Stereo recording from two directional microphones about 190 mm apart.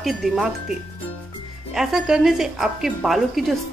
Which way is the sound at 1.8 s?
Centre (ahead or behind).